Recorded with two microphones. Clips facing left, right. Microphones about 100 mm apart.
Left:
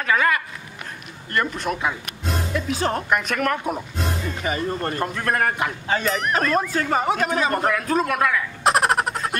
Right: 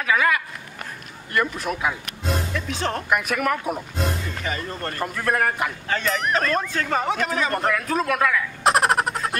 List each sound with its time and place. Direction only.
0.0 s speech: 5° right (ahead or behind)
3.2 s speech: 5° right (ahead or behind)
4.4 s speech: 15° left (ahead or behind)
5.0 s speech: centre (ahead or behind)